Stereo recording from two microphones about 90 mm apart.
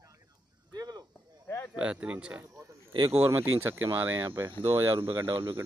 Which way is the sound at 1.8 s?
15° right (ahead or behind).